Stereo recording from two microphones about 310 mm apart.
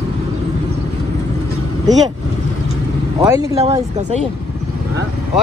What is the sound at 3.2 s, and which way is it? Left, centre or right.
Speech, centre.